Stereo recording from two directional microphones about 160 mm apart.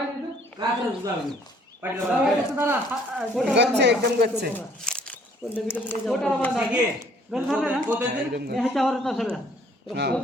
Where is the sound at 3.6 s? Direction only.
90° right.